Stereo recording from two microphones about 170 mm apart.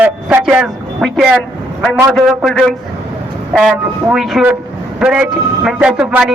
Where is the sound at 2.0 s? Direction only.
Centre (ahead or behind).